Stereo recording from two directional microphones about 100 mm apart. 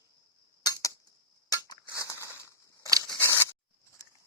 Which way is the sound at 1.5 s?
45° left (ahead or behind).